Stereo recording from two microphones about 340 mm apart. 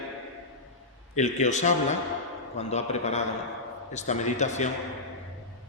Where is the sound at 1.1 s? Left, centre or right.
Centre.